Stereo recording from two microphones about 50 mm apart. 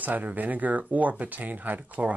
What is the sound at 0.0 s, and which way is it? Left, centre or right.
Speech, right.